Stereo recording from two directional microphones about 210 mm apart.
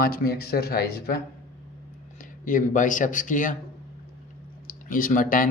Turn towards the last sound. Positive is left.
turn(degrees=40)  # may be behind; listen again after turning